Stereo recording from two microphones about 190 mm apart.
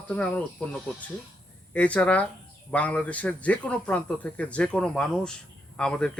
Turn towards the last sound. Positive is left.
turn(degrees=5)  # may be behind; listen again after turning